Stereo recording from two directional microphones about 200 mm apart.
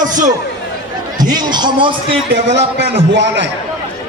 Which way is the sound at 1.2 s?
20° right (ahead or behind).